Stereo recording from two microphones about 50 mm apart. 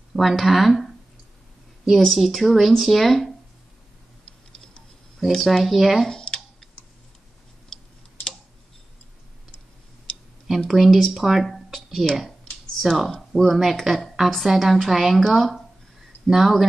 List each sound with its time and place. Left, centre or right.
0.1 s a woman's voice: centre
2.0 s a woman's voice: centre
5.2 s a woman's voice: centre
6.0 s a sound: centre
10.7 s a woman's voice: centre
12.5 s computer keyboard: centre
12.8 s a woman's voice: centre